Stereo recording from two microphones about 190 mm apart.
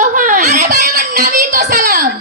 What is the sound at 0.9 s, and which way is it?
Music, 55° right (ahead or behind).